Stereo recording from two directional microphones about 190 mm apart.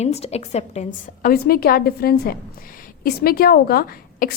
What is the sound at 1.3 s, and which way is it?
A woman's voice, 50° left (ahead or behind).